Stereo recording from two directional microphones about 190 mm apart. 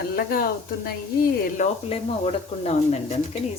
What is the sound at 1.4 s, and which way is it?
Speech, 40° left (ahead or behind).